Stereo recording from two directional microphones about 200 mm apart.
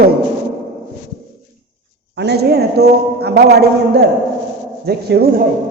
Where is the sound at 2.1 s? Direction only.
55° right (ahead or behind).